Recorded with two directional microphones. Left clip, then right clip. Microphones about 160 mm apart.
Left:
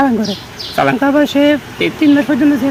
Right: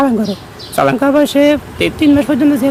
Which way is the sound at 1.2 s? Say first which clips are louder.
Right 1 dB; 35° right (ahead or behind).